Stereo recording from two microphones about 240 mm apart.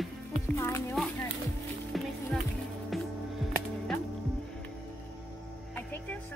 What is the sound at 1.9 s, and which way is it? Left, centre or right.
Music, centre.